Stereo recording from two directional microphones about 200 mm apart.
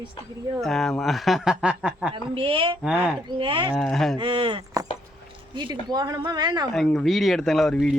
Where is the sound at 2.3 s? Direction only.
25° right (ahead or behind).